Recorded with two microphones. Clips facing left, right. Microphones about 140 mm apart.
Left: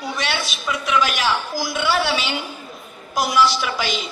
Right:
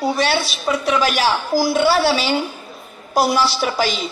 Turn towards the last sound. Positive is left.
turn(degrees=-35)  # may be behind; listen again after turning